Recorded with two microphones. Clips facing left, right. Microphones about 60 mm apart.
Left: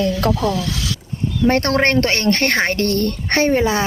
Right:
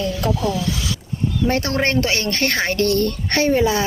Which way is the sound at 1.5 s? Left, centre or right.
Left.